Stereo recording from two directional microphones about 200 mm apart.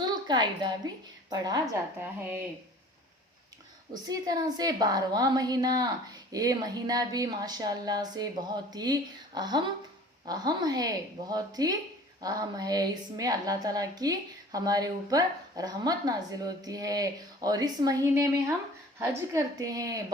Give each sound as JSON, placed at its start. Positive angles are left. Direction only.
{"t": 0.0, "sound": "a woman's voice", "side_deg": -20}
{"t": 4.1, "sound": "a woman's voice", "side_deg": -20}